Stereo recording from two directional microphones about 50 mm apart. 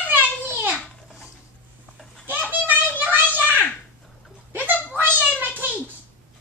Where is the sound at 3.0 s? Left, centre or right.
Right.